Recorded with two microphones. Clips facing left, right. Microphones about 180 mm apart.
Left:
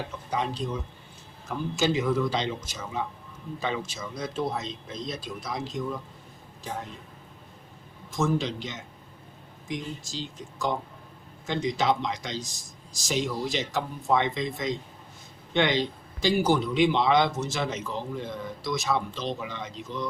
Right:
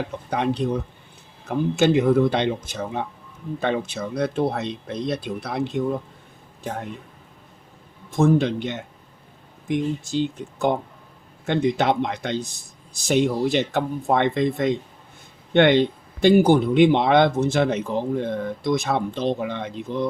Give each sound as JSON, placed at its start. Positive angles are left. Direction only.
{"t": 0.1, "sound": "speech", "side_deg": -60}
{"t": 8.1, "sound": "speech", "side_deg": -55}